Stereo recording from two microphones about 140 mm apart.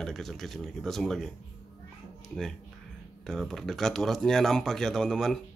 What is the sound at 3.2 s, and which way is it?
Speech, centre (ahead or behind).